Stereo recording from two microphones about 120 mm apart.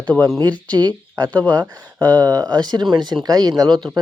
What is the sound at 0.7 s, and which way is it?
Speech, 35° right (ahead or behind).